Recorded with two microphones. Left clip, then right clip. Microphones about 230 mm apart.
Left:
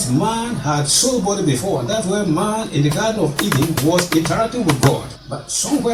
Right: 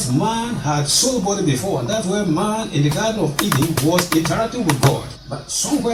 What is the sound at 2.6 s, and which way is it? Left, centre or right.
Speech, centre.